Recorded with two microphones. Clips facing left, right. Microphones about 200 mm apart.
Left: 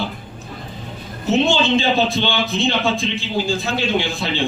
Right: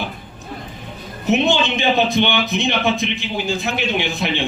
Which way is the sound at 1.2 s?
15° right (ahead or behind).